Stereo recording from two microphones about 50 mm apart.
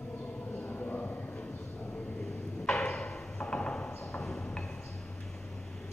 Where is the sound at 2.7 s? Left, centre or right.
Centre.